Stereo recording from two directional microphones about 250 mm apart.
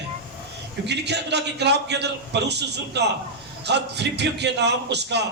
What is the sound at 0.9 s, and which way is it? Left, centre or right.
A man's voice, right.